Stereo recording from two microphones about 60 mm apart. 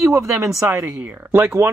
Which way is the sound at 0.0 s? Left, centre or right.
Right.